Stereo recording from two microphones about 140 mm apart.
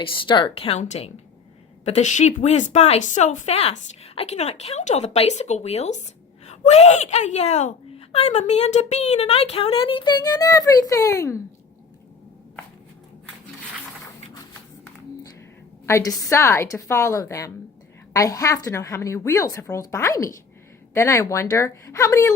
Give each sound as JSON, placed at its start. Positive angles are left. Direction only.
{"t": 0.0, "sound": "a child's voice", "side_deg": 35}
{"t": 15.9, "sound": "a woman's voice", "side_deg": 20}